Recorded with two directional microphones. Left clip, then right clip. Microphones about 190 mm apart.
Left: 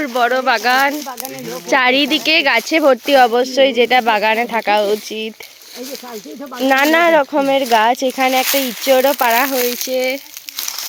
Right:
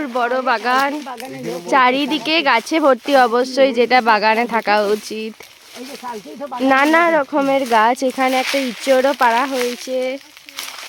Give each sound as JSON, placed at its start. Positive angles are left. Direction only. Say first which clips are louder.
{"t": 0.0, "sound": "speech", "louder": "left 3 dB", "side_deg": 5}
{"t": 6.7, "sound": "speech", "louder": "left 1 dB", "side_deg": -5}
{"t": 8.4, "sound": "speech", "louder": "left 2 dB", "side_deg": 65}
{"t": 8.9, "sound": "speech", "louder": "left 1 dB", "side_deg": 0}